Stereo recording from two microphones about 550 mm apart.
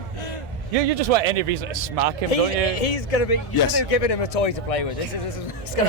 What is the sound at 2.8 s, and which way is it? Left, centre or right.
Speech, left.